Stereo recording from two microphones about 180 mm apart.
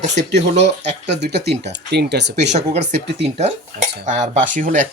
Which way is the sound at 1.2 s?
65° right (ahead or behind).